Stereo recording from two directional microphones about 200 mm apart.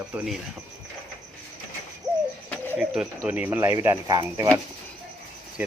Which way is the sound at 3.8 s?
20° right (ahead or behind).